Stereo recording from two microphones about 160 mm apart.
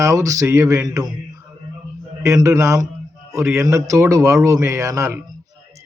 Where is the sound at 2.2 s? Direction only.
20° right (ahead or behind).